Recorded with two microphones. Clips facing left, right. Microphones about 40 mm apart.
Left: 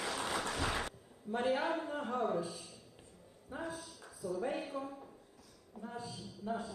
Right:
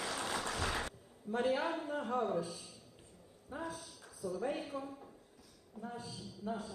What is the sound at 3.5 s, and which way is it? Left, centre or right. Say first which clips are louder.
A man's voice: left 1 dB; centre.